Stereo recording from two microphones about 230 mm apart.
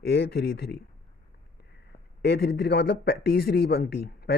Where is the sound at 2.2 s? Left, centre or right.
Left.